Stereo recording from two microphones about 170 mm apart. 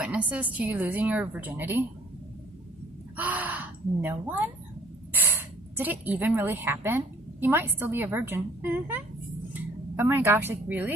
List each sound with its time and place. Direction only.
0.0 s a woman's voice: 10° right (ahead or behind)
3.2 s speech: 10° right (ahead or behind)
5.7 s a woman's voice: 10° right (ahead or behind)